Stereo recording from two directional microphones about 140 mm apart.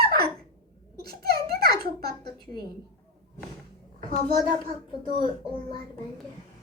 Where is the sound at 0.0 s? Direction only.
90° right.